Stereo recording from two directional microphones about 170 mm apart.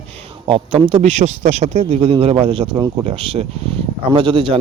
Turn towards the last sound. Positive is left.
turn(degrees=-30)  # may be behind; listen again after turning